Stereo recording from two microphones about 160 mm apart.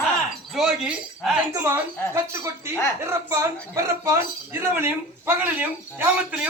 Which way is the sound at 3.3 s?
20° right (ahead or behind).